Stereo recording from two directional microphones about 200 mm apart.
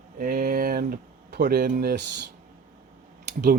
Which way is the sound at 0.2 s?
45° right (ahead or behind).